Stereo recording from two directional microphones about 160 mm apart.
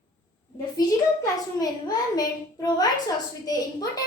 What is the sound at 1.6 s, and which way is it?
A child's voice, 25° left (ahead or behind).